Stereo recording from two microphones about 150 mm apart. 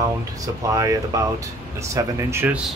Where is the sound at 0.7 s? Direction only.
20° right (ahead or behind).